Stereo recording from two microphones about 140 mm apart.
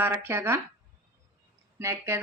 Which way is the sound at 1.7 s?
15° right (ahead or behind).